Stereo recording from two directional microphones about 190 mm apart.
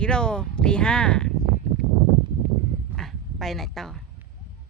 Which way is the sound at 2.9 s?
Centre (ahead or behind).